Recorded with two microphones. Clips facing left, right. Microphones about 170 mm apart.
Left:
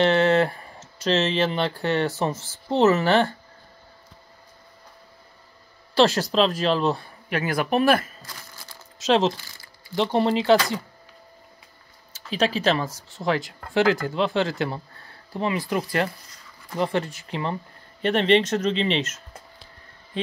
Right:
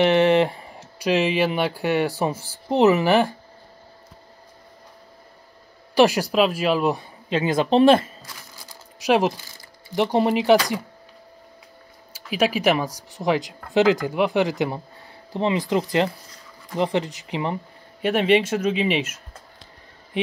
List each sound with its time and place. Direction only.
0.0 s speech: 15° right (ahead or behind)
5.9 s speech: 10° right (ahead or behind)
8.3 s speech: 10° right (ahead or behind)
12.1 s speech: 10° right (ahead or behind)